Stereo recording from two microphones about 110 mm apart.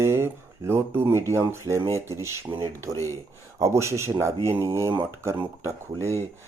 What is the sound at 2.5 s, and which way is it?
Speech, 45° right (ahead or behind).